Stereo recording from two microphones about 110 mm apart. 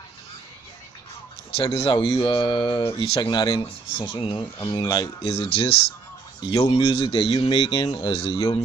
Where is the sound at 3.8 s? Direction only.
50° left (ahead or behind).